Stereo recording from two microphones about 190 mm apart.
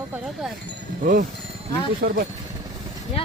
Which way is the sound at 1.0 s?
45° right (ahead or behind).